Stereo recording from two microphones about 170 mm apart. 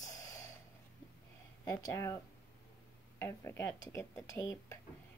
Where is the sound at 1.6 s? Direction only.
20° left (ahead or behind).